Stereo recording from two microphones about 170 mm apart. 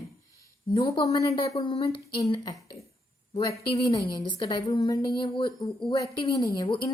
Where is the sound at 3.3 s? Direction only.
25° left (ahead or behind).